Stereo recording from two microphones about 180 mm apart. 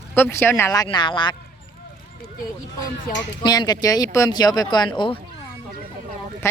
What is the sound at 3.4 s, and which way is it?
Speech, 25° left (ahead or behind).